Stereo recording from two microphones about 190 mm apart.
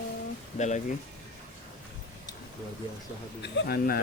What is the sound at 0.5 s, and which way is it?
Speech, 40° left (ahead or behind).